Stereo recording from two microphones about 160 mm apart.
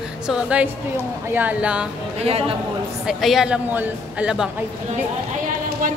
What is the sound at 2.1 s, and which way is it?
Speech, 40° right (ahead or behind).